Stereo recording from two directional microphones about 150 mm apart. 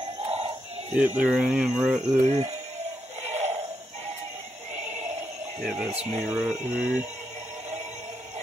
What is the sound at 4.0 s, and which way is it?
Synthetic singing, 50° right (ahead or behind).